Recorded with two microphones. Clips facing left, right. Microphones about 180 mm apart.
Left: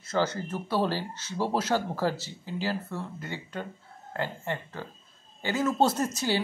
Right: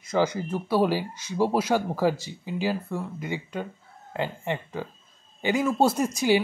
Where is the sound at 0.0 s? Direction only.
15° right (ahead or behind).